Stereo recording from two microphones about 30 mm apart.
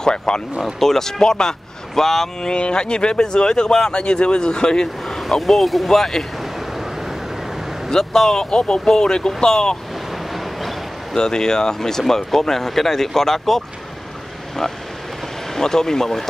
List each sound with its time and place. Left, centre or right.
0.0 s speech: left
0.7 s speech: centre
2.0 s speech: centre
2.4 s speech: left
5.0 s vehicle: centre
5.6 s speech: centre
5.9 s speech: centre
8.0 s speech: centre
11.1 s speech: left
15.5 s speech: centre